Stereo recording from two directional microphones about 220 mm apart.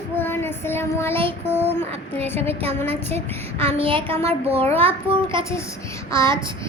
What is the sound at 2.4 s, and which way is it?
Speech, 25° right (ahead or behind).